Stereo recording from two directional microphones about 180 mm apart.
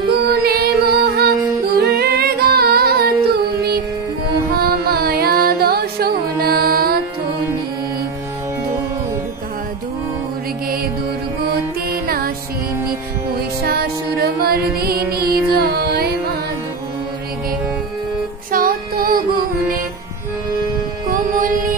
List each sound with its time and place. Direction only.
0.1 s music: 60° right (ahead or behind)
13.7 s music: 60° right (ahead or behind)
18.5 s music: 50° right (ahead or behind)
21.1 s music: 50° right (ahead or behind)